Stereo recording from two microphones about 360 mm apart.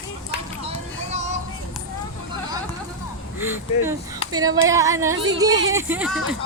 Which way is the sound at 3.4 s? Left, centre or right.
Centre.